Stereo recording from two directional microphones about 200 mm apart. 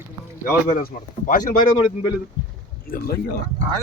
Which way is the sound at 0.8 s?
45° left (ahead or behind).